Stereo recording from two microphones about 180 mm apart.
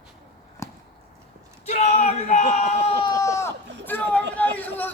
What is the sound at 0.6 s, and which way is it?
Chop, 15° left (ahead or behind).